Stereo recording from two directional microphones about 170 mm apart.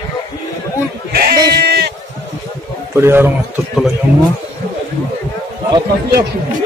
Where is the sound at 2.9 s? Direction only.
15° right (ahead or behind).